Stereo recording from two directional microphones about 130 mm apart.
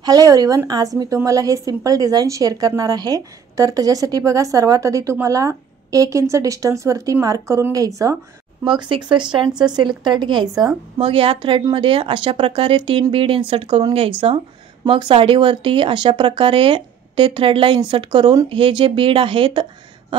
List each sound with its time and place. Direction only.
0.0 s a woman's voice: 30° right (ahead or behind)
8.6 s speech: 40° right (ahead or behind)
11.0 s speech: 45° right (ahead or behind)